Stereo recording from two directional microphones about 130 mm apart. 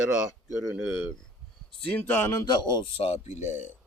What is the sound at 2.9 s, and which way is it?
Speech, 50° left (ahead or behind).